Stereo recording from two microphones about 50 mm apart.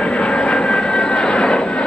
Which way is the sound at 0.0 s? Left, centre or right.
Left.